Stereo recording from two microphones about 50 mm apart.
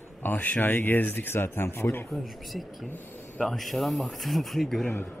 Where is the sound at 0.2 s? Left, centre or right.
Left.